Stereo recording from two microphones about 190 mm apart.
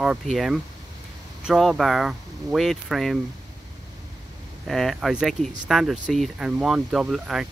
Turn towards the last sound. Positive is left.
turn(degrees=0)  # may be behind; listen again after turning